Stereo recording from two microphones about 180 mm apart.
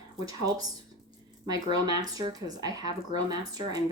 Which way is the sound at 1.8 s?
20° right (ahead or behind).